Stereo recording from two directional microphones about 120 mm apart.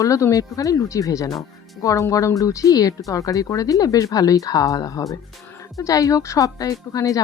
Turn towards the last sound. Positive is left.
turn(degrees=30)  # may be behind; listen again after turning